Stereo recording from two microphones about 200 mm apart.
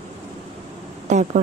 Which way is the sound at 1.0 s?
35° right (ahead or behind).